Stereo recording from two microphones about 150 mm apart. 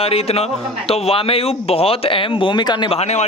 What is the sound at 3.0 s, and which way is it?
Speech, 50° left (ahead or behind).